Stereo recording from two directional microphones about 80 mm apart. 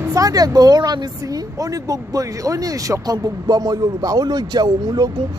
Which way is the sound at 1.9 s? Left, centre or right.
Right.